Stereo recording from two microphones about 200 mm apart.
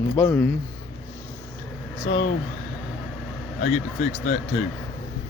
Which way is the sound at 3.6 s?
35° left (ahead or behind).